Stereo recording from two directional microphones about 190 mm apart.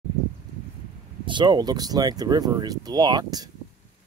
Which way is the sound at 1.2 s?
25° right (ahead or behind).